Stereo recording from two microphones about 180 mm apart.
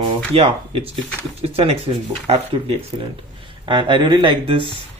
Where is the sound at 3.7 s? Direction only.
25° right (ahead or behind).